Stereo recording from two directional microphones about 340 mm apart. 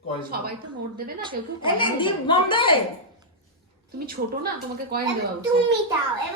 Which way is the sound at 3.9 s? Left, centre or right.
Right.